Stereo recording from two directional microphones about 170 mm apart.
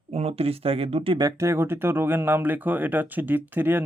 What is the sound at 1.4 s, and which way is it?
Speech, 15° right (ahead or behind).